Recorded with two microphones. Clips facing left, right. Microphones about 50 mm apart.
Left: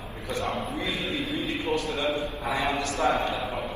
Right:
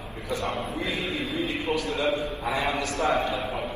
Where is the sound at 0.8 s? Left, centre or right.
Right.